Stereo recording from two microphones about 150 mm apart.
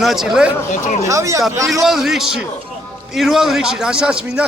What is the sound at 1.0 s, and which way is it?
Speech, 20° right (ahead or behind).